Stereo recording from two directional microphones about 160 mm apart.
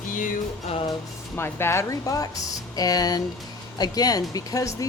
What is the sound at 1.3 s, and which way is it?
Speech, 15° left (ahead or behind).